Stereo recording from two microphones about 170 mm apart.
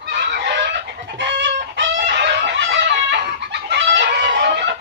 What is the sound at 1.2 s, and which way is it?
Chicken, 90° right.